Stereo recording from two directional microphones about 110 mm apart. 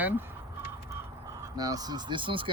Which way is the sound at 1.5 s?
35° right (ahead or behind).